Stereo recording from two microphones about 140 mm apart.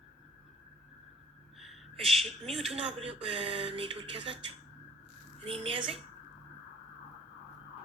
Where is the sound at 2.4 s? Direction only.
45° right (ahead or behind).